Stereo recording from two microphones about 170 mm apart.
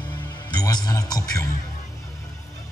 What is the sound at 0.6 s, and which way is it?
Speech, 25° left (ahead or behind).